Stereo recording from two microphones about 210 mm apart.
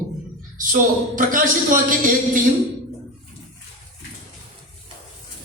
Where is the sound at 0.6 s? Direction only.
40° right (ahead or behind).